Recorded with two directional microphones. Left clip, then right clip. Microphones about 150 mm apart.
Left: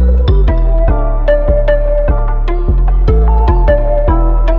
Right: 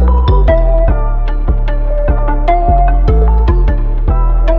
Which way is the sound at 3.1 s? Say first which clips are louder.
Left 1 dB; 40° left (ahead or behind).